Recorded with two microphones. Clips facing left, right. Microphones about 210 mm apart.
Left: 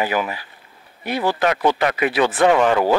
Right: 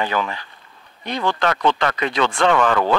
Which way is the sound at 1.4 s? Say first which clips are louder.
Left 1 dB; 15° left (ahead or behind).